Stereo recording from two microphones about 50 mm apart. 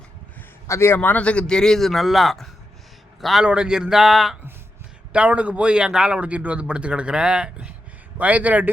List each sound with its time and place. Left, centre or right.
0.7 s a man's voice: left
0.9 s speech: left
1.2 s a man's voice: left; by 3.4 s centre
3.4 s speech: centre
5.1 s speech: right
6.1 s speech: right
8.2 s speech: right